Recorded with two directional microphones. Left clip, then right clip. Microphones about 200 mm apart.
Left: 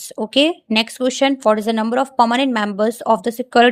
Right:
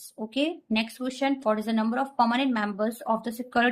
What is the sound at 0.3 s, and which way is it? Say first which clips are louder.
A woman's voice: left 12 dB; 50° left (ahead or behind).